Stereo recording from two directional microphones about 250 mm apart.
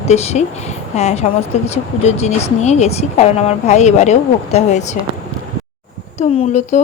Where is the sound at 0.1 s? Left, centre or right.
Left.